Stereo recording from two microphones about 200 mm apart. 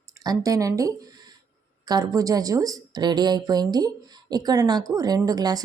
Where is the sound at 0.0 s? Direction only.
20° right (ahead or behind).